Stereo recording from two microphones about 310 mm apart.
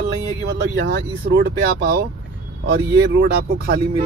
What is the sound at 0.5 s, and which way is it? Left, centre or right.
Speech, right.